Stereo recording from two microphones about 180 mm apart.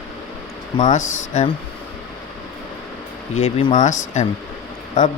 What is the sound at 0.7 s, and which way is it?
Speech, 40° left (ahead or behind).